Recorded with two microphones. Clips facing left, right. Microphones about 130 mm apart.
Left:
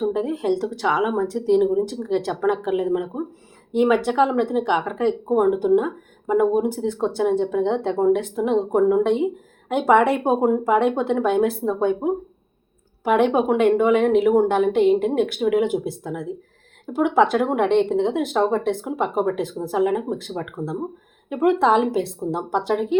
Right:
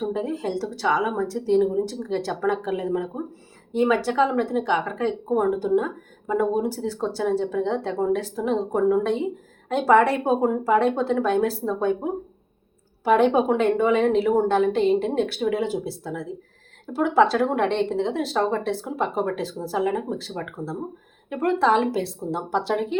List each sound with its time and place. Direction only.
0.0 s speech: 20° left (ahead or behind)
1.0 s speech: 5° left (ahead or behind)
1.3 s speech: 15° left (ahead or behind)
21.2 s speech: 20° left (ahead or behind)